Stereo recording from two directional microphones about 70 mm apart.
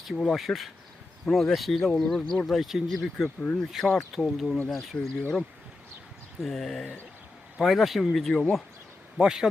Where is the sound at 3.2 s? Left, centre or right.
Left.